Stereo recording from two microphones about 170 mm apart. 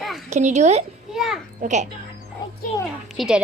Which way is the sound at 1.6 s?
45° right (ahead or behind).